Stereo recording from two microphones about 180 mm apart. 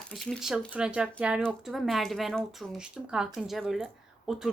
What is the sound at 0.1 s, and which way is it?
A woman's voice, centre (ahead or behind).